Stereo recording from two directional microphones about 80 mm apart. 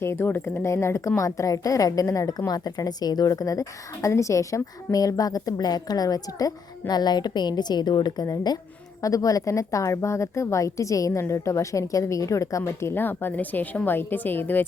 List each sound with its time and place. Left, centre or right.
0.0 s a woman's voice: left
2.5 s a woman's voice: left
9.0 s a woman's voice: left